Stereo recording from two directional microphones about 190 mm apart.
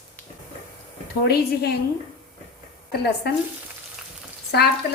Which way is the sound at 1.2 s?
60° left (ahead or behind).